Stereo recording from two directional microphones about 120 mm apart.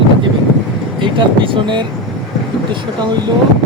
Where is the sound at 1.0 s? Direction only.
45° right (ahead or behind).